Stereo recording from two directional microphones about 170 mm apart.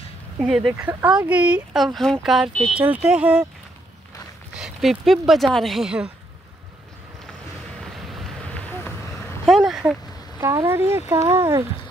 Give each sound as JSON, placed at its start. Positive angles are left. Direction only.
{"t": 0.4, "sound": "speech", "side_deg": -5}
{"t": 4.6, "sound": "speech", "side_deg": 0}
{"t": 8.1, "sound": "run", "side_deg": 0}
{"t": 9.5, "sound": "a sound", "side_deg": -5}
{"t": 10.4, "sound": "speech", "side_deg": -20}